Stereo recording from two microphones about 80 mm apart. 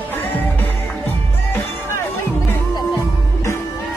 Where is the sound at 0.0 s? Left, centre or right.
Left.